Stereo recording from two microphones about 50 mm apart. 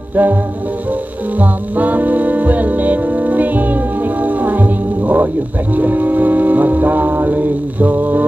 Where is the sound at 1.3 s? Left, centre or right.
Right.